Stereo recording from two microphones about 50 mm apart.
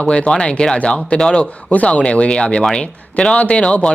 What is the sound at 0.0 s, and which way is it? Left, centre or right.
Speech, centre.